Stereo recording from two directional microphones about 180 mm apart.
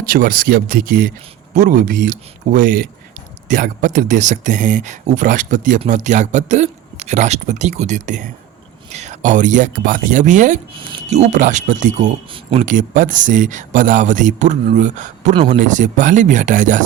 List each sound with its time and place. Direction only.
0.1 s speech: 50° right (ahead or behind)
12.3 s speech: 30° right (ahead or behind)
12.6 s speech: 45° right (ahead or behind)